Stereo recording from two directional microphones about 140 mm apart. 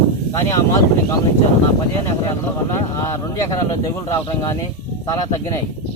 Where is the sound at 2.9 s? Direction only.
25° left (ahead or behind).